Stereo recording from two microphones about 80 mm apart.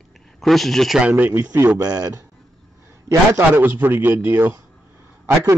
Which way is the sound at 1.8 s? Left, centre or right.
Right.